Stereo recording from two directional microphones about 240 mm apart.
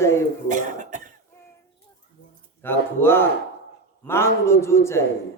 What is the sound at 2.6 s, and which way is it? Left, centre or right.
A woman's voice, centre.